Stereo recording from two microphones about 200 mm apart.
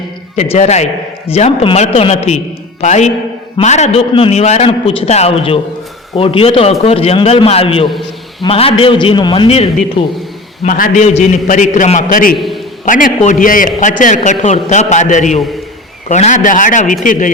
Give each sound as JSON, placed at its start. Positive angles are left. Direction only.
{"t": 0.3, "sound": "a man's voice", "side_deg": 30}
{"t": 10.6, "sound": "a man's voice", "side_deg": 40}